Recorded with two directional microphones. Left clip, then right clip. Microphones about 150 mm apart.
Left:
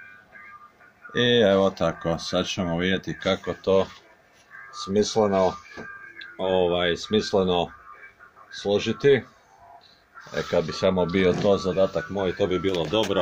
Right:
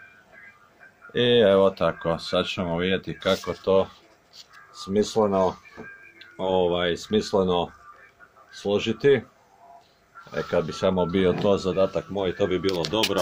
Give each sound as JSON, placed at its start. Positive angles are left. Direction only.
{"t": 1.1, "sound": "speech", "side_deg": 5}
{"t": 4.8, "sound": "speech", "side_deg": 5}
{"t": 10.3, "sound": "speech", "side_deg": 5}